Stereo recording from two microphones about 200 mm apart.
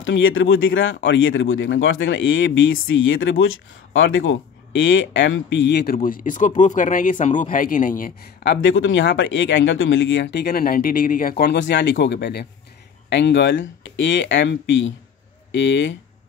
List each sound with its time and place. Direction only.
0.0 s speech: 70° left (ahead or behind)
5.9 s speech: 40° left (ahead or behind); by 16.0 s 65° left (ahead or behind)